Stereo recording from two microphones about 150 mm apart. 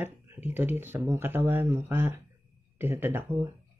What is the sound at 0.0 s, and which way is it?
Speech, 15° right (ahead or behind).